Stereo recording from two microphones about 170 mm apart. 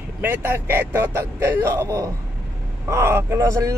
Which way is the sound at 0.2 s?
10° right (ahead or behind).